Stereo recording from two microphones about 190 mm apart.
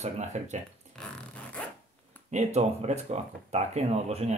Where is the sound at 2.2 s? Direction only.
35° right (ahead or behind).